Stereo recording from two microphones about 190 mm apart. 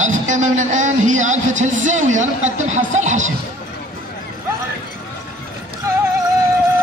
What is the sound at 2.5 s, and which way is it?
Speech, 40° right (ahead or behind).